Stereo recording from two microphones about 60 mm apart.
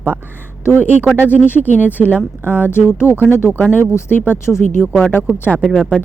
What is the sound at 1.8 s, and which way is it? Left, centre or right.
Speech, right.